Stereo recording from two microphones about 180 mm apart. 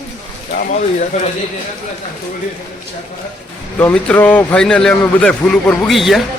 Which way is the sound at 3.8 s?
10° left (ahead or behind).